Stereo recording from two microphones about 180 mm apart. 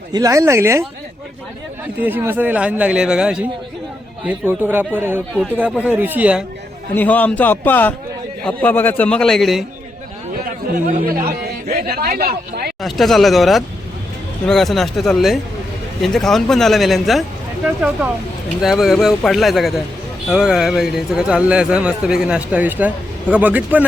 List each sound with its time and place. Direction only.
0.1 s a man's voice: 20° right (ahead or behind)
2.0 s a man's voice: 10° right (ahead or behind)
6.9 s a man's voice: 10° left (ahead or behind)
11.7 s a man's voice: 60° right (ahead or behind)
12.8 s speech: centre (ahead or behind)
18.6 s a man's voice: centre (ahead or behind)